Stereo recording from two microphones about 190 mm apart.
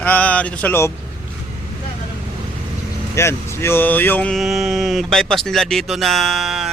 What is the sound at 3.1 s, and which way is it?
Speech, 15° left (ahead or behind).